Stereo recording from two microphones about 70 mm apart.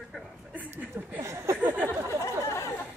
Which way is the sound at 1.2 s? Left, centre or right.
Right.